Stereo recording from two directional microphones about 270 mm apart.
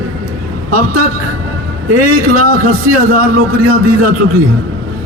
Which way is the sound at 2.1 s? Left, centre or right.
Right.